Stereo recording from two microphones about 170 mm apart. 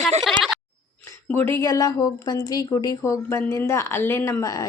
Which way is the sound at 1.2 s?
15° left (ahead or behind).